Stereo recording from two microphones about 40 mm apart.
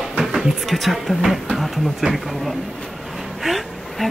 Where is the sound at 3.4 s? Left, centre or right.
Centre.